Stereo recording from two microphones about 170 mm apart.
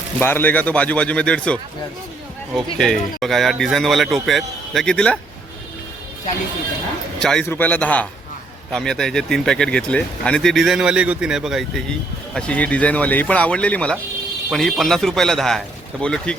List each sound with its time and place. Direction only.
0.2 s speech: 10° left (ahead or behind)
2.7 s speech: 5° left (ahead or behind)
7.2 s a man's voice: 5° left (ahead or behind)